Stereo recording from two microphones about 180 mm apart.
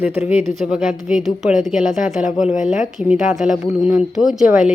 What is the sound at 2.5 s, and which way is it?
Speech, 45° left (ahead or behind).